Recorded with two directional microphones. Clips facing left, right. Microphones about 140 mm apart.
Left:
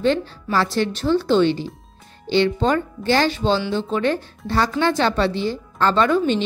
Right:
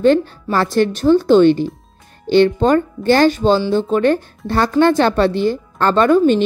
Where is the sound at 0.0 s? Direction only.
50° right (ahead or behind).